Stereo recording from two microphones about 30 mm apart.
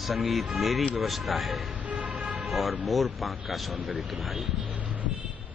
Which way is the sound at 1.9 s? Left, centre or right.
Right.